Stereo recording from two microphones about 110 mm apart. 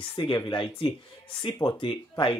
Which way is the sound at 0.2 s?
45° left (ahead or behind).